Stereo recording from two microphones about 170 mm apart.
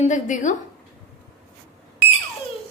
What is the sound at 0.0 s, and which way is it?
Speech, 45° left (ahead or behind).